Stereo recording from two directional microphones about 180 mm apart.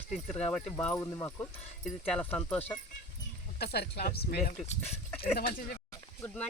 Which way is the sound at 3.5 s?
60° left (ahead or behind).